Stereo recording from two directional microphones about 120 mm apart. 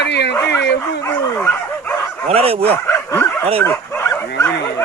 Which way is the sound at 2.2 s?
55° right (ahead or behind).